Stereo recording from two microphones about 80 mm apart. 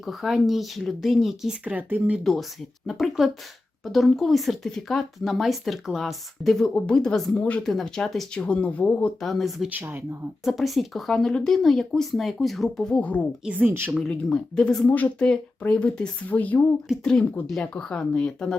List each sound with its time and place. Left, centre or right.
0.0 s speech: centre
1.6 s speech: centre
2.1 s speech: centre
7.6 s speech: centre
9.2 s speech: centre
9.6 s speech: right
10.4 s speech: centre
13.4 s speech: centre
13.7 s speech: right
14.1 s speech: centre
14.8 s speech: left
17.0 s speech: centre